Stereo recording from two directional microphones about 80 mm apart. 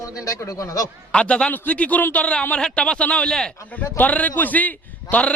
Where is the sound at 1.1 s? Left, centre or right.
Centre.